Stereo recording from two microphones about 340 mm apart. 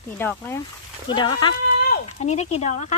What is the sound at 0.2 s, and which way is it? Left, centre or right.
Speech, centre.